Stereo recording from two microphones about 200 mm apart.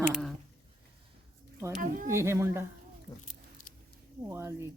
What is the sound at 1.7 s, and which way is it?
Speech, 40° right (ahead or behind).